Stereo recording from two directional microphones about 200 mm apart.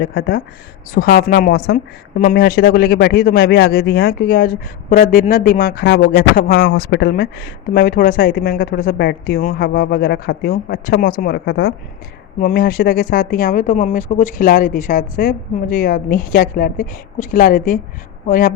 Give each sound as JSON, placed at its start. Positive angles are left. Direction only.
{"t": 0.0, "sound": "a woman's voice", "side_deg": 50}